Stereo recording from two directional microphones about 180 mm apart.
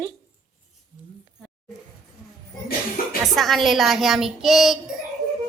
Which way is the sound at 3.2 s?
Centre (ahead or behind).